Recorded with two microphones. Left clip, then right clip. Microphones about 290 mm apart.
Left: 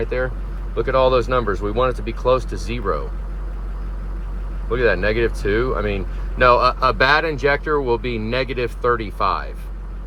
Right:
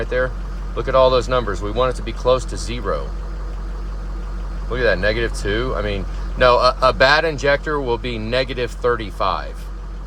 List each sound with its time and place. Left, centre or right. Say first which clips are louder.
0.0 s speech: right 2 dB; centre
4.7 s speech: even; centre